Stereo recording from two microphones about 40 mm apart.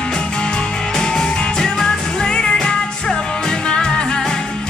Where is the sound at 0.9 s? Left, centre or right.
Centre.